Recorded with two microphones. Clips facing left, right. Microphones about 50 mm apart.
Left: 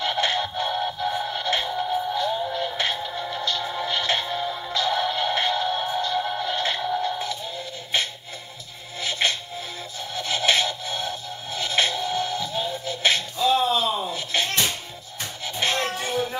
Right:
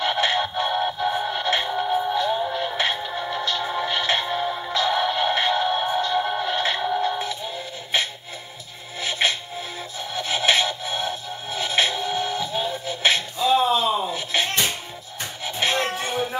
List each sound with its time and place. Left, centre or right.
0.0 s music: centre